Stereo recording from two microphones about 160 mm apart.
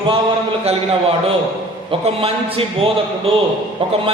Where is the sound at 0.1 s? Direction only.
35° right (ahead or behind).